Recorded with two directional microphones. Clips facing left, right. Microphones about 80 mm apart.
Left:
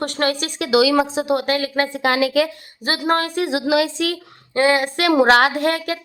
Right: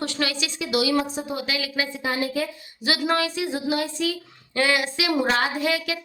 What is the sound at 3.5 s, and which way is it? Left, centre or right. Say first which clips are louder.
Speech: left 7 dB; left.